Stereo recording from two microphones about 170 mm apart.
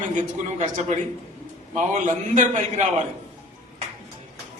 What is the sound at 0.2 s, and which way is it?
A man's voice, 45° right (ahead or behind).